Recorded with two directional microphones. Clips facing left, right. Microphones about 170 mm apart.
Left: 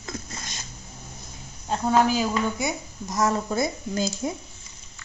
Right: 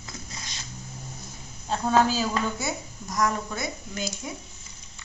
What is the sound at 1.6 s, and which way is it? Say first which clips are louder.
A woman's voice: left 1 dB; 15° left (ahead or behind).